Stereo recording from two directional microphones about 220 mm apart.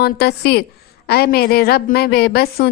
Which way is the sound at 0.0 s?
45° left (ahead or behind).